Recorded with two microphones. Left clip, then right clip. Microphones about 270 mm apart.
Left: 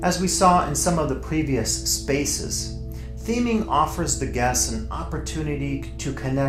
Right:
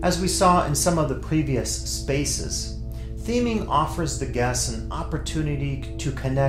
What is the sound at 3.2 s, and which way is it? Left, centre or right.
Speech, right.